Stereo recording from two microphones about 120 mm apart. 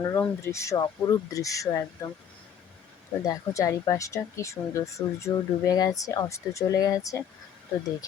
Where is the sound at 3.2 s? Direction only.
25° left (ahead or behind).